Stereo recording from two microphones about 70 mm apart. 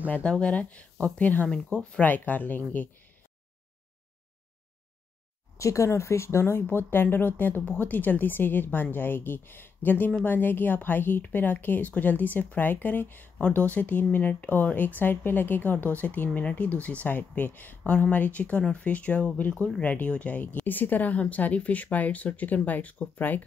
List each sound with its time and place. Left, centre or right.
0.1 s speech: centre
5.6 s speech: left